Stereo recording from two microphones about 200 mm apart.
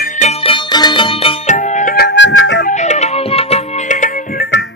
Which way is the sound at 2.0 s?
60° left (ahead or behind).